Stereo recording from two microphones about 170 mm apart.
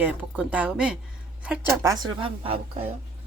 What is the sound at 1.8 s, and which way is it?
A woman's voice, 20° right (ahead or behind).